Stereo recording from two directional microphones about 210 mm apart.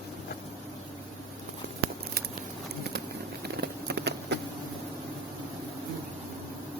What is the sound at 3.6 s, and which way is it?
Clip-clop, 50° right (ahead or behind).